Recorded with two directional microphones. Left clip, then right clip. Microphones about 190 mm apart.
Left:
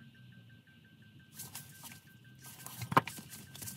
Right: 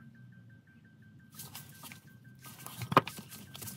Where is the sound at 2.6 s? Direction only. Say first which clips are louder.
Right 3 dB; 5° left (ahead or behind).